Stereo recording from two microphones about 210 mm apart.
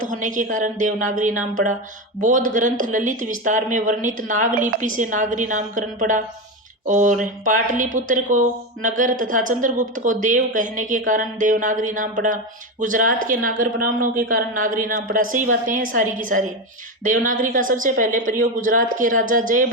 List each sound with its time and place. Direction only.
0.0 s speech: 40° right (ahead or behind)